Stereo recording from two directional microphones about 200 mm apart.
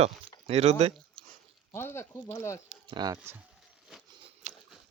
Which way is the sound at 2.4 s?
15° left (ahead or behind).